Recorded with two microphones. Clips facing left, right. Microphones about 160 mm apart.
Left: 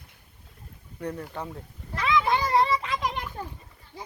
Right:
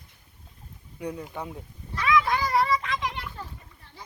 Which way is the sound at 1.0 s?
10° right (ahead or behind).